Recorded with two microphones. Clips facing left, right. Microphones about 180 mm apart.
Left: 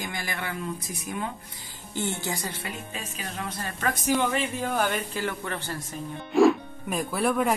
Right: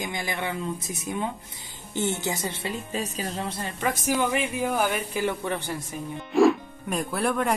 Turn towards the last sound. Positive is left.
turn(degrees=0)  # may be behind; listen again after turning